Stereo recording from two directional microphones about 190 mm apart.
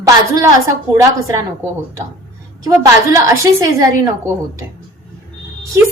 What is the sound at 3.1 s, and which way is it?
Speech, 15° right (ahead or behind).